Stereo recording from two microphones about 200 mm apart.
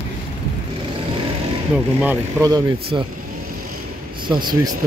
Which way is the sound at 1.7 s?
10° right (ahead or behind).